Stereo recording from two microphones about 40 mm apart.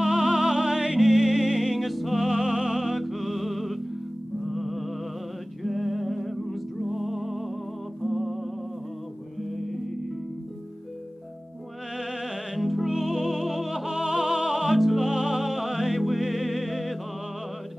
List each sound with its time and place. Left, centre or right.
0.0 s music: centre
2.8 s music: centre
12.0 s music: centre
13.8 s music: centre
15.0 s music: centre